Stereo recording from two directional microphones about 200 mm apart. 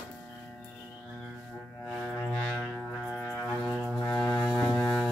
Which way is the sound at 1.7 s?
5° left (ahead or behind).